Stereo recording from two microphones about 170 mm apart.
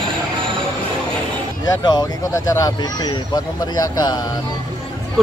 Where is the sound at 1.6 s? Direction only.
25° left (ahead or behind).